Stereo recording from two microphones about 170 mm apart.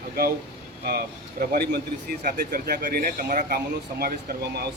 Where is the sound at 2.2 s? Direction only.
65° right (ahead or behind).